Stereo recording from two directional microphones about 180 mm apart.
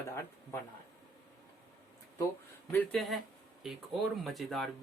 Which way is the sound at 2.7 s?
5° left (ahead or behind).